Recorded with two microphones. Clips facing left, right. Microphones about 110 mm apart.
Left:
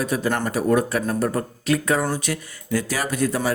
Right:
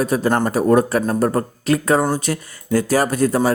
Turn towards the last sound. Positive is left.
turn(degrees=-40)  # may be behind; listen again after turning